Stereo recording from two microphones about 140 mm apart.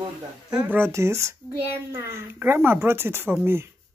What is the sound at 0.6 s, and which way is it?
Speech, 15° right (ahead or behind).